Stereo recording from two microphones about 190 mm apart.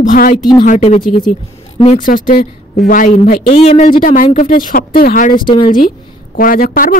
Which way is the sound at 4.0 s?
45° left (ahead or behind).